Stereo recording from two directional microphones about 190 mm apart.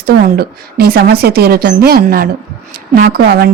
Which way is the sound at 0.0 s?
55° right (ahead or behind).